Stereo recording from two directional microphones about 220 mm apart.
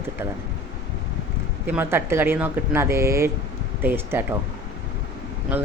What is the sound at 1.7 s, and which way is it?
Speech, 10° right (ahead or behind).